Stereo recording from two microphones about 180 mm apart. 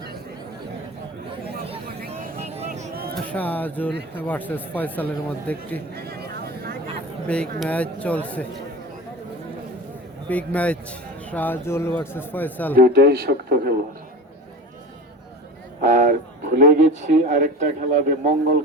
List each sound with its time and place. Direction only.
2.0 s vehicle: 50° right (ahead or behind)
2.6 s a sound: 40° right (ahead or behind)
2.9 s a sound: 60° right (ahead or behind)
3.3 s speech: 10° left (ahead or behind)
5.9 s vehicle: 60° right (ahead or behind)
7.6 s speech: 5° left (ahead or behind)
10.2 s speech: 10° left (ahead or behind)
12.7 s speech: 60° right (ahead or behind)
15.8 s speech: 45° right (ahead or behind)